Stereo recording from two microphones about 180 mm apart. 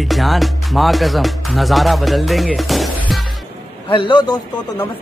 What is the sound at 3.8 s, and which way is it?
Speech, 30° left (ahead or behind).